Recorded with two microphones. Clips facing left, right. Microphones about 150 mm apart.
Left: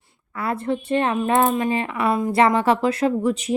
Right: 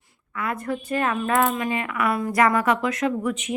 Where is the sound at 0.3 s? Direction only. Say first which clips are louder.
Left 3 dB; 30° left (ahead or behind).